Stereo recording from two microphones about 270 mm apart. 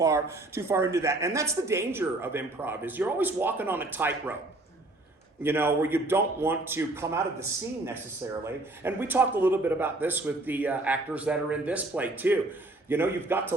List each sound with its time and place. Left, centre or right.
0.0 s speech: centre
5.4 s speech: centre
8.4 s speech: centre